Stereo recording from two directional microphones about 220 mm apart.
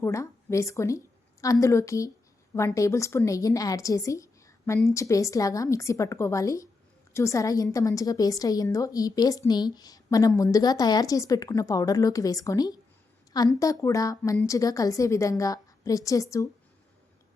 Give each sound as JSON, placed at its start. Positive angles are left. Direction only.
{"t": 0.0, "sound": "a woman's voice", "side_deg": 15}